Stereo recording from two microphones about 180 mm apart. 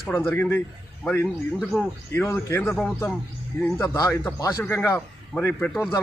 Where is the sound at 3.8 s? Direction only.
10° left (ahead or behind).